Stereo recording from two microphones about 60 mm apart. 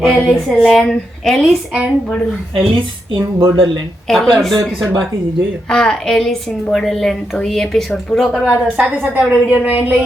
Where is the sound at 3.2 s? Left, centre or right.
Right.